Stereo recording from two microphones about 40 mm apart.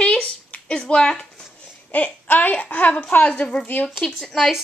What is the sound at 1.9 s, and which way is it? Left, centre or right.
Speech, left.